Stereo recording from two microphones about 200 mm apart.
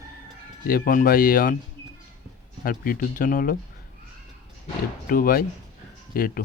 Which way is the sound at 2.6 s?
45° left (ahead or behind).